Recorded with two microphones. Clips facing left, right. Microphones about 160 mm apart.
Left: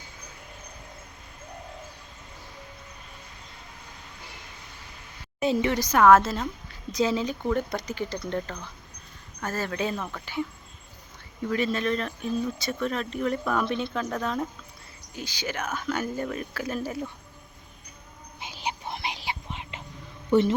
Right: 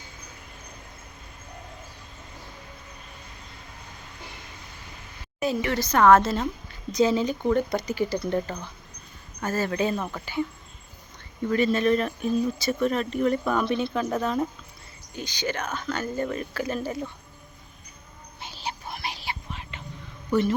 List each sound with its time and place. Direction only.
5.4 s speech: 20° left (ahead or behind); by 10.4 s 5° right (ahead or behind)
11.4 s speech: centre (ahead or behind)
15.1 s speech: 5° left (ahead or behind)
18.3 s music: 15° left (ahead or behind)
20.3 s speech: 25° left (ahead or behind)